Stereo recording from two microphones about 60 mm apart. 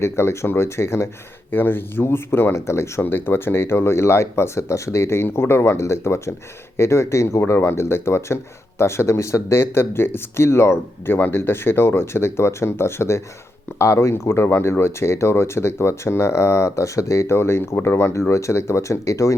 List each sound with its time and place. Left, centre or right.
0.0 s speech: left
3.0 s speech: left